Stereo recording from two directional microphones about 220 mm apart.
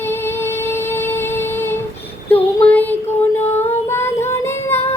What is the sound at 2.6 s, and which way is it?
Child singing, 5° left (ahead or behind).